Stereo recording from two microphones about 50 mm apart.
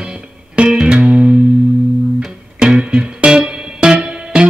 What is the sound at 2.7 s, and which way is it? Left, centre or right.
Music, centre.